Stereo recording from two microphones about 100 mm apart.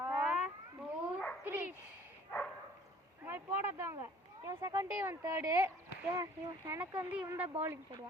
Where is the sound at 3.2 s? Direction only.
25° right (ahead or behind).